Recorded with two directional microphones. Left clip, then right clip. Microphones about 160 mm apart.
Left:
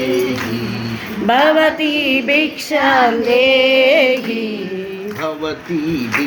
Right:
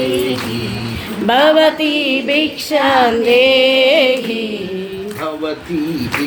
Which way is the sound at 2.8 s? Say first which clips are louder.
Right 1 dB; 15° right (ahead or behind).